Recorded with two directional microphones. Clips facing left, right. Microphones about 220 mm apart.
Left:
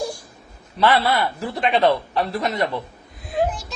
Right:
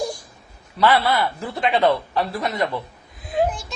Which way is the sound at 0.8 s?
20° left (ahead or behind).